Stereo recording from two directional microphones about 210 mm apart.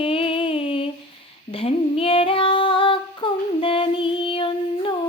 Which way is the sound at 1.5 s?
25° left (ahead or behind).